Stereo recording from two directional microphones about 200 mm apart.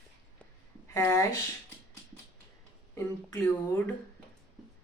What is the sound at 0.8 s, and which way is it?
Speech, 15° left (ahead or behind).